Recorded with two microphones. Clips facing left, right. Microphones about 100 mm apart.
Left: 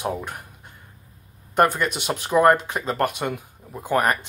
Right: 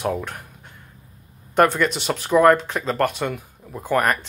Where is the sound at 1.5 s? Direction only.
10° left (ahead or behind).